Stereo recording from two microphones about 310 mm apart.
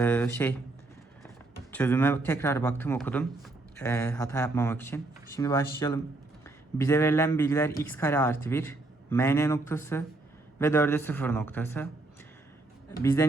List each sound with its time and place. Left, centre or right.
0.0 s speech: centre
1.7 s a man's voice: centre
13.0 s speech: centre